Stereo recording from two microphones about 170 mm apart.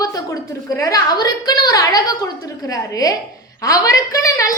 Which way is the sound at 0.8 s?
20° left (ahead or behind).